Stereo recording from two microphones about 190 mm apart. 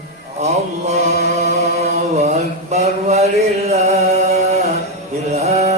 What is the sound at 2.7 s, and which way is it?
Music, 35° right (ahead or behind).